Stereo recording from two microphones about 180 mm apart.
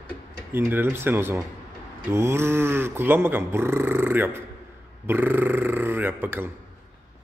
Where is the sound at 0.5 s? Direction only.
10° right (ahead or behind).